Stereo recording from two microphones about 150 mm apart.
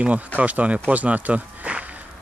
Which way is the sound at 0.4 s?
10° right (ahead or behind).